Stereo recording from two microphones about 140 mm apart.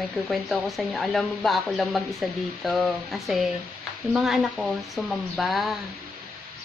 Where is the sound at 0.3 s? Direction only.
Centre (ahead or behind).